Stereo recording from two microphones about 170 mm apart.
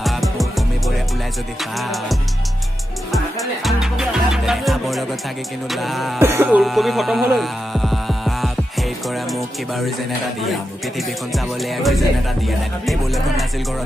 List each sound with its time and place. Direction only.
0.0 s music: centre (ahead or behind)
6.1 s speech: 15° right (ahead or behind)
6.6 s speech: centre (ahead or behind)
11.0 s music: centre (ahead or behind)